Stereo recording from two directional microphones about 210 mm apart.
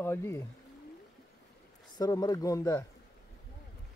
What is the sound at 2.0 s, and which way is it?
Speech, 20° left (ahead or behind).